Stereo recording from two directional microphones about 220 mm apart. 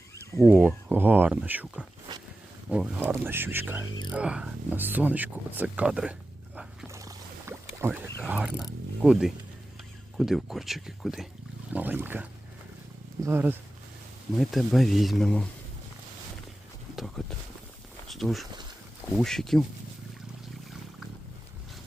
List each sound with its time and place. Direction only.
0.3 s speech: 15° left (ahead or behind)
0.9 s speech: 10° right (ahead or behind)
2.1 s a sound: 25° right (ahead or behind)
2.6 s speech: 5° right (ahead or behind)
6.6 s boat: 10° right (ahead or behind)
10.2 s speech: centre (ahead or behind)
16.9 s speech: centre (ahead or behind)